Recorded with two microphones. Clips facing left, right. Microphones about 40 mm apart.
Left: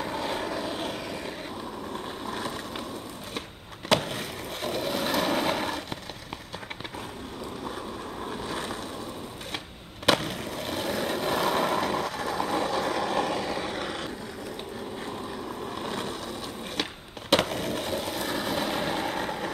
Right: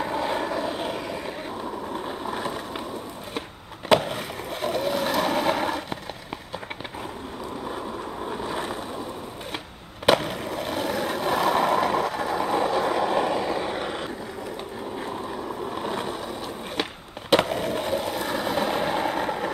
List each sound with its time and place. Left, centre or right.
0.0 s vehicle: centre
3.9 s boat: centre
8.2 s vehicle: centre
10.0 s skateboard: centre
15.0 s boat: centre
17.3 s skateboard: centre